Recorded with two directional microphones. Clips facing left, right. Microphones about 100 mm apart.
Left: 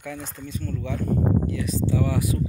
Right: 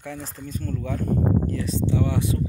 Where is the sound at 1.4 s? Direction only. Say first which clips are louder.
Even; 35° right (ahead or behind).